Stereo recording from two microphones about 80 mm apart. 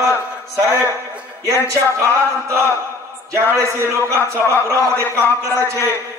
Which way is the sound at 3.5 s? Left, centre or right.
Right.